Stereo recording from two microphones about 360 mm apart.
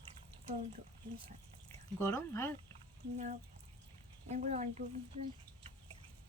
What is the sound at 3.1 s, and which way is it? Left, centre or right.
Speech, centre.